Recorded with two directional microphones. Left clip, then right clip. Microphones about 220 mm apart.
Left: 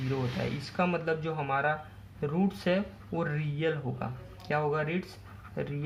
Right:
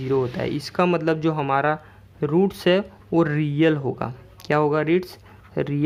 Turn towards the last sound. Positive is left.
turn(degrees=-45)  # may be behind; listen again after turning